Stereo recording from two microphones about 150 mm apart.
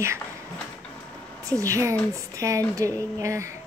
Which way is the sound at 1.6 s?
20° right (ahead or behind).